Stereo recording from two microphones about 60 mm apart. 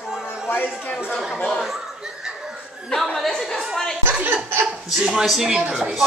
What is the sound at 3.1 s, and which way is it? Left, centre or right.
Speech, centre.